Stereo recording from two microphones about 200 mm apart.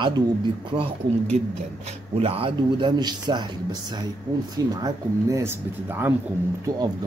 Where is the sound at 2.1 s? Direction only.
30° right (ahead or behind).